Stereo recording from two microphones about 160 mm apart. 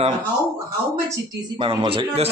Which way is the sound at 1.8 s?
35° right (ahead or behind).